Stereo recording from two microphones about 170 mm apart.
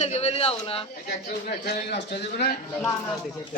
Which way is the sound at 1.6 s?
75° left (ahead or behind).